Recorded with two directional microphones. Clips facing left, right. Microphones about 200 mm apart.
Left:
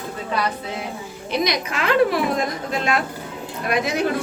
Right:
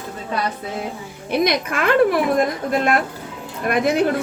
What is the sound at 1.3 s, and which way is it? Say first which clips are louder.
A woman's voice: right 4 dB; 55° right (ahead or behind).